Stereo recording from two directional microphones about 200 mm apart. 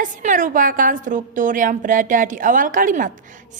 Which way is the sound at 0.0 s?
40° right (ahead or behind).